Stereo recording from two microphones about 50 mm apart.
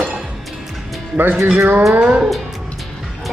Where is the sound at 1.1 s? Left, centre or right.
Right.